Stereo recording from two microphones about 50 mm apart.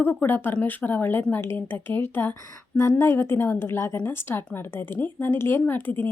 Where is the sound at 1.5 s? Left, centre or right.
Left.